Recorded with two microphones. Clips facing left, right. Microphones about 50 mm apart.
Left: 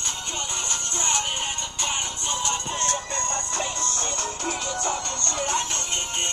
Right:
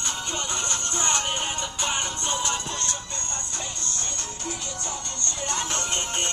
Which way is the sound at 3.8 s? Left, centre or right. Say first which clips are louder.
Left 6 dB; left.